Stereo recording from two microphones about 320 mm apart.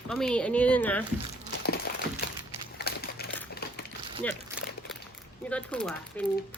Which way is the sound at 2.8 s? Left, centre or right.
Left.